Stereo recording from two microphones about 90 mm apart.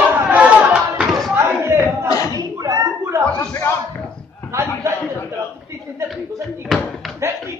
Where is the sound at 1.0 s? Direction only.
Centre (ahead or behind).